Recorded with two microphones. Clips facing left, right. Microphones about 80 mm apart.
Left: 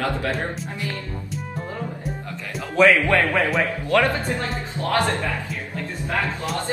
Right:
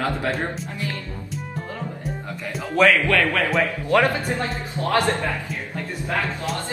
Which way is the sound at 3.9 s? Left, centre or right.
Centre.